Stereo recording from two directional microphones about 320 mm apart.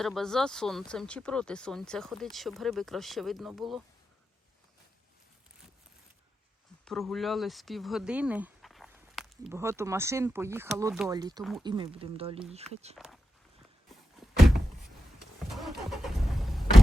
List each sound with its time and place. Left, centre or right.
0.0 s speech: centre
6.8 s speech: centre
14.2 s thunk: centre
15.4 s vehicle: centre